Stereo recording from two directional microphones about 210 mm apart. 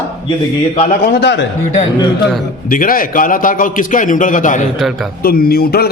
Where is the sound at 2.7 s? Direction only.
40° left (ahead or behind).